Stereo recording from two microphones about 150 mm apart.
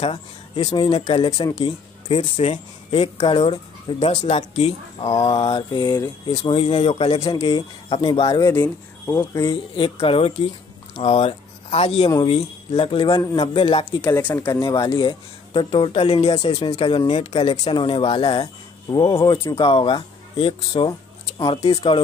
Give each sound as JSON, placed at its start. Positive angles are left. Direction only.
{"t": 0.6, "sound": "speech", "side_deg": 30}
{"t": 1.6, "sound": "speech", "side_deg": 45}
{"t": 6.5, "sound": "speech", "side_deg": 45}
{"t": 8.5, "sound": "speech", "side_deg": 15}
{"t": 9.5, "sound": "speech", "side_deg": 35}
{"t": 13.2, "sound": "speech", "side_deg": 20}
{"t": 13.5, "sound": "speech", "side_deg": 35}
{"t": 14.0, "sound": "speech", "side_deg": 15}